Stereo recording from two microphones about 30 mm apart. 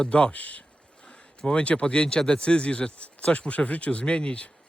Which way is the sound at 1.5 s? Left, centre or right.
Left.